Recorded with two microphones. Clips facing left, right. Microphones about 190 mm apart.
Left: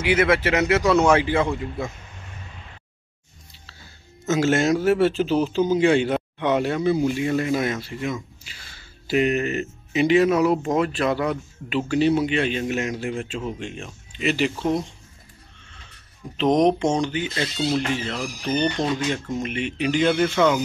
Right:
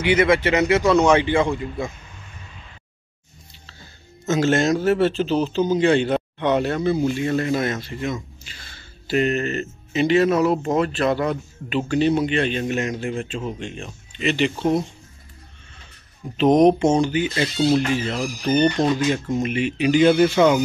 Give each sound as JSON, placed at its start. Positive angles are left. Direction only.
{"t": 0.0, "sound": "a man's voice", "side_deg": 5}
{"t": 4.3, "sound": "a man's voice", "side_deg": 5}
{"t": 16.3, "sound": "a man's voice", "side_deg": -5}
{"t": 20.3, "sound": "speech", "side_deg": -20}